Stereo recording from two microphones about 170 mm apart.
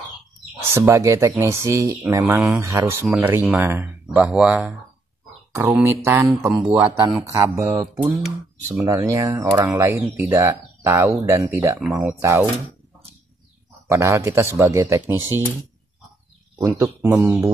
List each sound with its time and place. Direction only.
0.7 s speech: 15° right (ahead or behind)
5.5 s speech: 20° right (ahead or behind)
7.5 s speech: 25° right (ahead or behind)
8.0 s speech: 10° right (ahead or behind)
8.8 s speech: 20° right (ahead or behind)
12.0 s speech: 5° right (ahead or behind)
13.8 s speech: 15° right (ahead or behind)
16.5 s speech: 15° right (ahead or behind)